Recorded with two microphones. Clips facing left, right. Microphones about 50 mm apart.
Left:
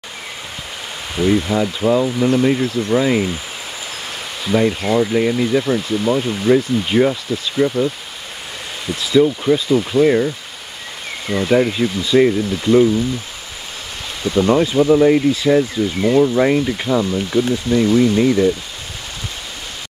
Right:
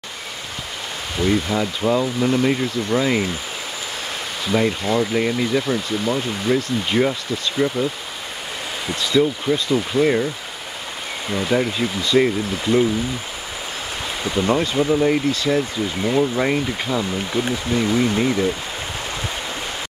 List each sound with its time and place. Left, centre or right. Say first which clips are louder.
1.1 s speech: left 4 dB; centre
4.5 s speech: left 3 dB; centre
9.0 s speech: left 5 dB; centre
14.2 s speech: left 6 dB; centre
14.5 s speech: left 6 dB; centre
17.3 s speech: left 5 dB; centre